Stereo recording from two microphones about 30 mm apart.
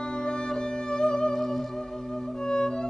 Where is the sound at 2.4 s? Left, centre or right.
Left.